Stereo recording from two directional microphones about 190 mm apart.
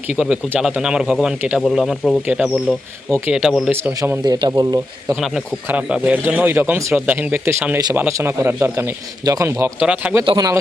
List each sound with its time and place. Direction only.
0.2 s speech: 5° right (ahead or behind)
4.2 s speech: 20° right (ahead or behind)
5.2 s speech: 5° right (ahead or behind)
10.2 s speech: 20° right (ahead or behind)